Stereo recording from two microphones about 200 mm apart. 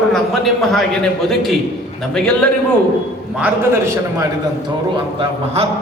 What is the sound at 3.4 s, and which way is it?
Speech, 15° right (ahead or behind).